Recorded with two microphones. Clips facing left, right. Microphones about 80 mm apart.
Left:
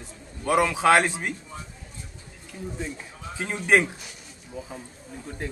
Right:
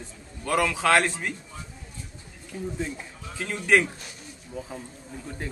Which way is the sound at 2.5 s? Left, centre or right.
Centre.